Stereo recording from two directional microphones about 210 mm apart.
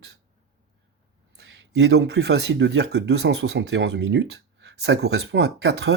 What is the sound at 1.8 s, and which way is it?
Speech, 55° right (ahead or behind).